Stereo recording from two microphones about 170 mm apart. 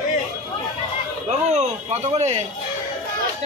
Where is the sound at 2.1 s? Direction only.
40° right (ahead or behind).